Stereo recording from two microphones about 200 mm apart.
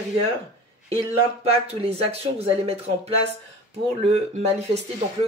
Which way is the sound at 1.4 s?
30° right (ahead or behind).